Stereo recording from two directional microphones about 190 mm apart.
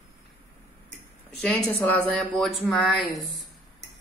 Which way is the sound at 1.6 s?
10° left (ahead or behind).